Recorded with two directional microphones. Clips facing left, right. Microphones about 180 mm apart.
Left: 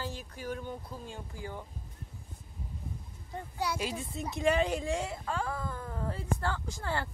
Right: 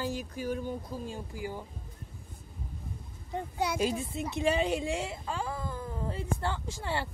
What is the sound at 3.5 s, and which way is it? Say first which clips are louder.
A woman's voice: right 4 dB; 20° right (ahead or behind).